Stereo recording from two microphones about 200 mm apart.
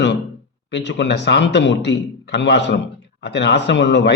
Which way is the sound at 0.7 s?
60° left (ahead or behind).